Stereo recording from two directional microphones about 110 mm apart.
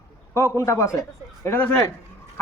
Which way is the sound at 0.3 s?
25° left (ahead or behind).